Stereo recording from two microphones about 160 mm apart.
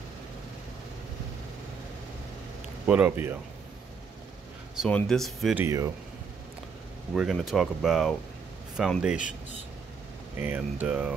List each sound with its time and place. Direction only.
2.9 s speech: 10° right (ahead or behind)
4.7 s speech: 5° left (ahead or behind)
5.6 s speech: 20° right (ahead or behind)
7.2 s speech: centre (ahead or behind)
10.3 s speech: 10° right (ahead or behind)